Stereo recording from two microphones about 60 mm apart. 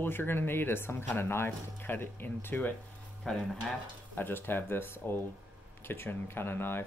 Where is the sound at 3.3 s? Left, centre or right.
Centre.